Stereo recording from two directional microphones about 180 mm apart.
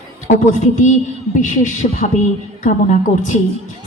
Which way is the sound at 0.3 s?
45° left (ahead or behind).